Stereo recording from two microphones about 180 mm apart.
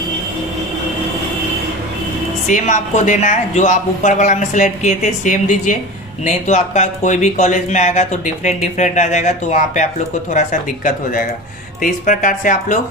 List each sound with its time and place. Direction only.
2.5 s speech: 45° left (ahead or behind)